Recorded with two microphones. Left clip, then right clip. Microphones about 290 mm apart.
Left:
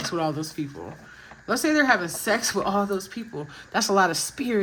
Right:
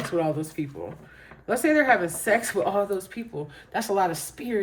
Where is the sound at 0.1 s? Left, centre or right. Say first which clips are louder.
Right 4 dB; centre.